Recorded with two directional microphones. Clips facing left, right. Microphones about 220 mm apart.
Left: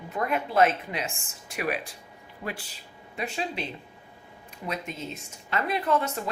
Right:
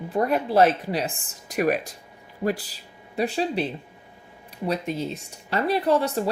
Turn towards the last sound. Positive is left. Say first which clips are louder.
# right 5 dB
turn(degrees=-35)  # may be behind; listen again after turning